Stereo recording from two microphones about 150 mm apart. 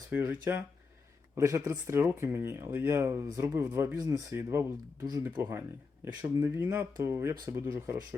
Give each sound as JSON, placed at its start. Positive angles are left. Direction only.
{"t": 0.1, "sound": "speech", "side_deg": -15}